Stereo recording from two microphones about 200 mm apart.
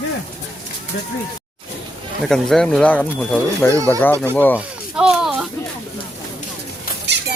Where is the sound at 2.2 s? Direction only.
Centre (ahead or behind).